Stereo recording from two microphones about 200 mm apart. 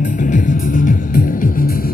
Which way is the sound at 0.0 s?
40° left (ahead or behind).